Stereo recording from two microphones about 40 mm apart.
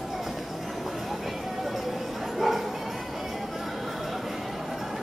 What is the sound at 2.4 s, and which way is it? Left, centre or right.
Bow-wow, centre.